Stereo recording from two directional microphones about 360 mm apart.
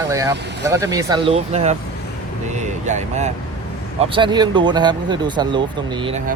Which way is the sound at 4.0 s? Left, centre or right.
Centre.